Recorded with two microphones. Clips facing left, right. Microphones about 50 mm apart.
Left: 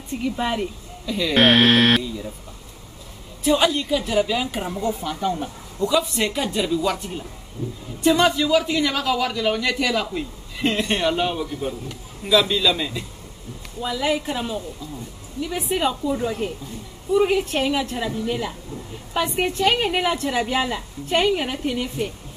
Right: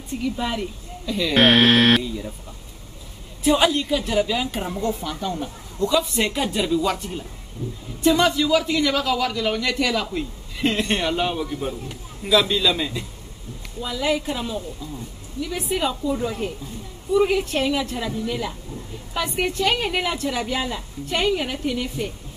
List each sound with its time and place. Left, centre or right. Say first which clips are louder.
0.4 s a woman's voice: left 5 dB; left
1.0 s speech: even; centre
3.4 s a man's voice: right 1 dB; centre
5.9 s speech: even; centre
8.0 s a man's voice: even; centre
13.7 s a man's voice: left 1 dB; centre